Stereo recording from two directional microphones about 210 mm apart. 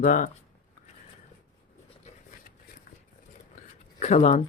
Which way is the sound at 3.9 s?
35° left (ahead or behind).